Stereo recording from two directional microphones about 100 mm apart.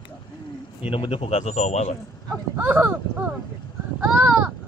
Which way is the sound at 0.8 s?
65° left (ahead or behind).